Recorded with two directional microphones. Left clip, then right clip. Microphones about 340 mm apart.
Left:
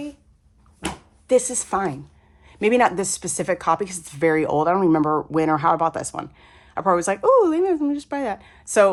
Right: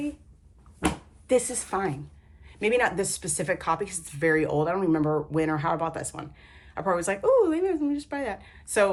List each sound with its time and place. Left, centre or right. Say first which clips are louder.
1.3 s speech: left 5 dB; centre